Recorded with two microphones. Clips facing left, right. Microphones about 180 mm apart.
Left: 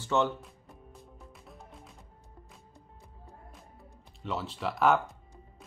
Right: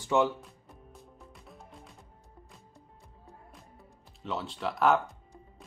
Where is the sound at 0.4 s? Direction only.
Centre (ahead or behind).